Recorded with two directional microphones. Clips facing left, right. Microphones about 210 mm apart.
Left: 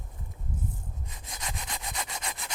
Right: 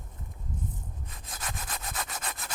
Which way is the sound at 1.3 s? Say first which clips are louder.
Even; 20° left (ahead or behind).